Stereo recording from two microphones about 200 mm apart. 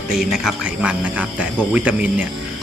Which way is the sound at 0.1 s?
Centre (ahead or behind).